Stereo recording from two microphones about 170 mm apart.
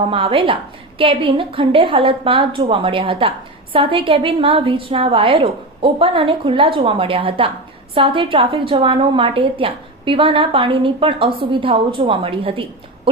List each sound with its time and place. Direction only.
0.1 s a woman's voice: 30° right (ahead or behind)